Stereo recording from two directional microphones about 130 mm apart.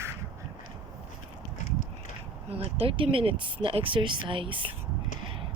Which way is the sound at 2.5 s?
50° right (ahead or behind).